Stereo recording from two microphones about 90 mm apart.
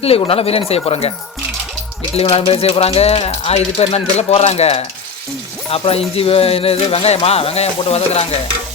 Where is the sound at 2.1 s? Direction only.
90° left.